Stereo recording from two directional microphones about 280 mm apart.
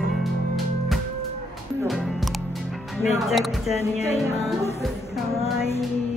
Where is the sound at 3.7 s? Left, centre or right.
Left.